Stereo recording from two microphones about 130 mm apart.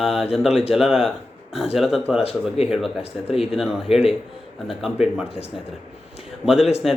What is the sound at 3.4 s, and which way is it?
Speech, 5° right (ahead or behind).